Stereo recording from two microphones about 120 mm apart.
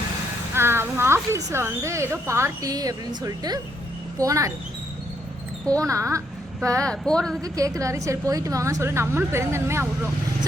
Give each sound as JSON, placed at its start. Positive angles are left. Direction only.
{"t": 0.5, "sound": "speech", "side_deg": -20}
{"t": 5.6, "sound": "speech", "side_deg": -25}
{"t": 6.8, "sound": "speech", "side_deg": 5}
{"t": 7.4, "sound": "speech", "side_deg": -30}